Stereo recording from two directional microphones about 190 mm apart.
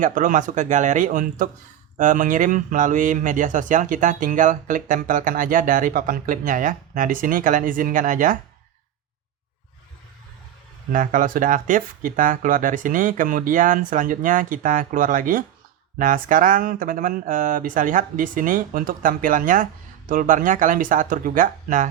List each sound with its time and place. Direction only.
0.0 s speech: 45° right (ahead or behind)
10.9 s speech: 45° right (ahead or behind)